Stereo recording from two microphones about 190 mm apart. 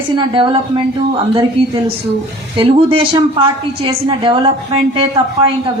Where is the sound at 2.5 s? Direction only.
25° right (ahead or behind).